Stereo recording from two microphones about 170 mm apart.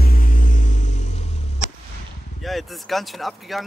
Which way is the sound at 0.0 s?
55° left (ahead or behind).